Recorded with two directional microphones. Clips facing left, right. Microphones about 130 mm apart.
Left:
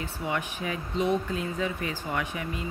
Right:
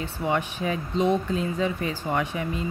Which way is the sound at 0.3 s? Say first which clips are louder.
Right 6 dB; 30° right (ahead or behind).